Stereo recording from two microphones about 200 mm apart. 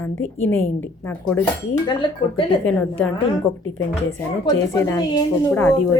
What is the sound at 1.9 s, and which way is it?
Speech, 25° left (ahead or behind).